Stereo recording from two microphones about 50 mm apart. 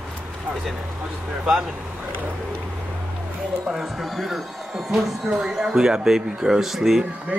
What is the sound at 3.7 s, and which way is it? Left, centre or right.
Speech, centre.